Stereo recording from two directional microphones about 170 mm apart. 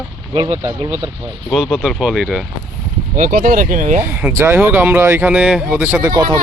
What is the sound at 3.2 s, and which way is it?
Speech, 55° right (ahead or behind).